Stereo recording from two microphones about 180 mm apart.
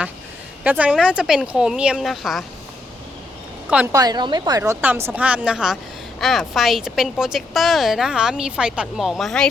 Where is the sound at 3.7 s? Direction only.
5° right (ahead or behind).